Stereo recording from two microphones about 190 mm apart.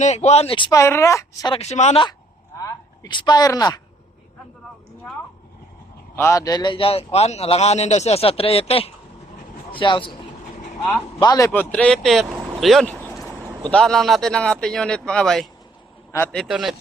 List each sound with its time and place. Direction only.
0.0 s speech: 35° left (ahead or behind); by 1.5 s 15° left (ahead or behind)
1.5 s a man's voice: 35° left (ahead or behind); by 3.8 s 20° left (ahead or behind)
6.1 s a man's voice: 15° left (ahead or behind)
11.2 s a man's voice: 20° left (ahead or behind)
11.7 s speech: 5° left (ahead or behind)
12.5 s a sound: centre (ahead or behind)
13.7 s speech: 5° left (ahead or behind)